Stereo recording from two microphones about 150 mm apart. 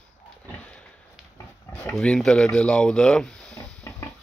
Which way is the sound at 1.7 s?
15° left (ahead or behind).